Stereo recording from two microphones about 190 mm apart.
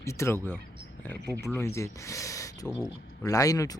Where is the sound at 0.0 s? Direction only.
15° left (ahead or behind).